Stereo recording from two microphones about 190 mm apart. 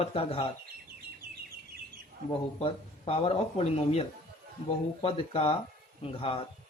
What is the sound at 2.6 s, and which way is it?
Speech, 30° left (ahead or behind).